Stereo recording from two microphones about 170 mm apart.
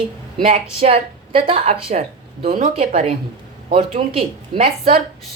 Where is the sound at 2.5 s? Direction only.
50° right (ahead or behind).